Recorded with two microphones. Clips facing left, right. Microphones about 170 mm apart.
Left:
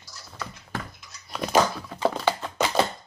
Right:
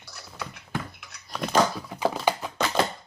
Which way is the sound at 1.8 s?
15° right (ahead or behind).